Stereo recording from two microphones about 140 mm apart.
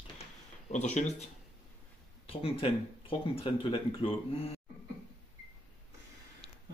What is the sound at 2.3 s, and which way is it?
Speech, 40° left (ahead or behind).